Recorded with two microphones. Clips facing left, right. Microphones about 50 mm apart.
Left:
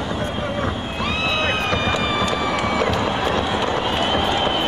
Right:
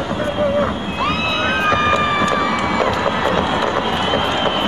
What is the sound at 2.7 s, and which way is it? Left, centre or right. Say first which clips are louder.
Music: right 3 dB; right.